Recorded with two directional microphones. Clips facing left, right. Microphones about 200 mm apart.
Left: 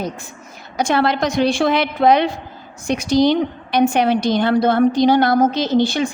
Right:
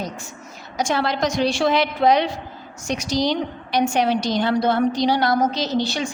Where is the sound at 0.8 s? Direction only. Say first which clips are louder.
Left 4 dB; 60° left (ahead or behind).